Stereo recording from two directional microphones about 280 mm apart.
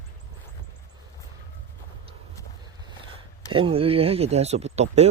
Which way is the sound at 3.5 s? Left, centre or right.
Centre.